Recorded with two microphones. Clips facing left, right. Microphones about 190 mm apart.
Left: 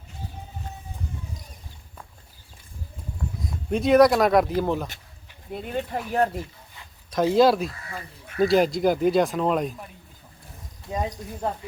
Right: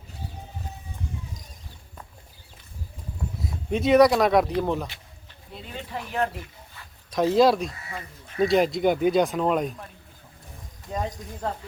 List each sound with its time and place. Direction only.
3.4 s speech: centre (ahead or behind)
5.5 s speech: 55° left (ahead or behind)
7.1 s speech: centre (ahead or behind)
10.9 s speech: 5° left (ahead or behind)